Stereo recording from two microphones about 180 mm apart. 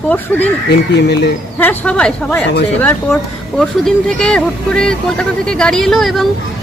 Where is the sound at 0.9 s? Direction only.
70° left (ahead or behind).